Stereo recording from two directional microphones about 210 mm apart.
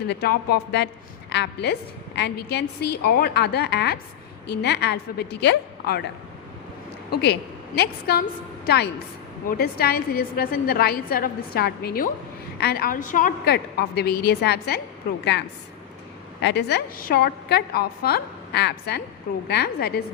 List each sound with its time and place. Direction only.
0.1 s a woman's voice: 50° left (ahead or behind)
7.8 s a woman's voice: 50° left (ahead or behind)